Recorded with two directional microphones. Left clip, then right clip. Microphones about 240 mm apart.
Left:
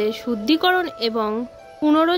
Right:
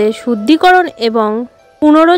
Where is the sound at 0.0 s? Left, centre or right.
Right.